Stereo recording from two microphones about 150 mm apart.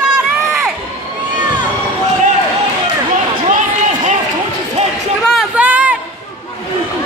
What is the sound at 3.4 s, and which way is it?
Run, 55° right (ahead or behind).